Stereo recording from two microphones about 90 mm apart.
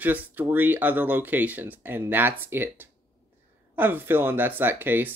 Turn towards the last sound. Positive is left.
turn(degrees=-20)  # may be behind; listen again after turning